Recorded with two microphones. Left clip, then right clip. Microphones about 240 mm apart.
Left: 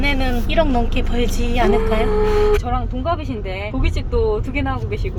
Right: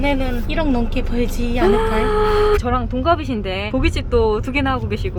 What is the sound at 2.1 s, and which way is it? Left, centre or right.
Speech, right.